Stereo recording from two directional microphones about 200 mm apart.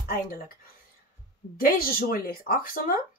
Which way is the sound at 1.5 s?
45° left (ahead or behind).